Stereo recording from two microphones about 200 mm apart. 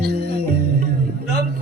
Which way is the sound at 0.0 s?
55° right (ahead or behind).